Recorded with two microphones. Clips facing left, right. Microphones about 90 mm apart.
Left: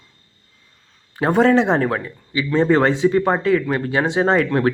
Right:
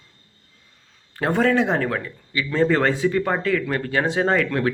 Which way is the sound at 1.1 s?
15° left (ahead or behind).